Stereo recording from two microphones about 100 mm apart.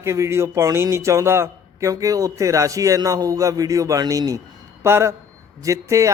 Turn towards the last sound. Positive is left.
turn(degrees=-30)  # may be behind; listen again after turning